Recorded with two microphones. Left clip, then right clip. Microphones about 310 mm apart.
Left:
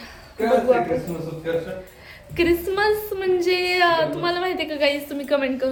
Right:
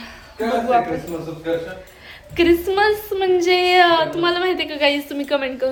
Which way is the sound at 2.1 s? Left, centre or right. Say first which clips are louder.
Right 4 dB; centre.